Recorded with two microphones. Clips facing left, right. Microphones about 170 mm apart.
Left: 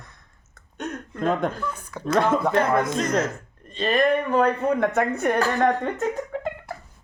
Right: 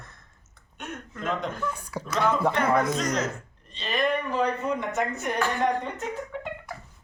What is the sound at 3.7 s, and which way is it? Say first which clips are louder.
A woman's voice: left 6 dB; 50° left (ahead or behind).